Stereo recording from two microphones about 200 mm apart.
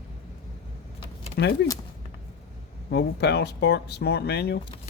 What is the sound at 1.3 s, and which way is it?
Speech, 55° left (ahead or behind).